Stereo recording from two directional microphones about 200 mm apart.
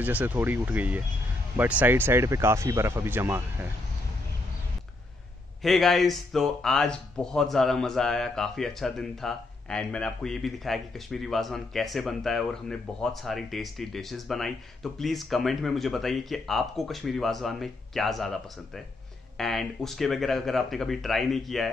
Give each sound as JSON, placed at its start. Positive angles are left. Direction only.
{"t": 0.0, "sound": "speech", "side_deg": -10}
{"t": 5.6, "sound": "speech", "side_deg": 0}